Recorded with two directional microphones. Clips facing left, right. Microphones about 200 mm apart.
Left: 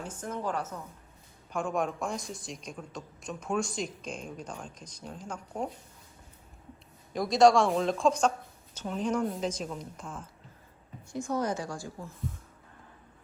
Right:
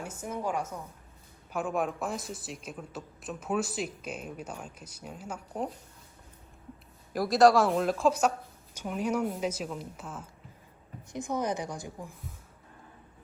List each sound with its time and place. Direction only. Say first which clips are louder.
0.0 s a woman's voice: even; 10° right (ahead or behind)
7.1 s a woman's voice: even; 5° right (ahead or behind)
11.1 s a woman's voice: left 1 dB; 20° right (ahead or behind)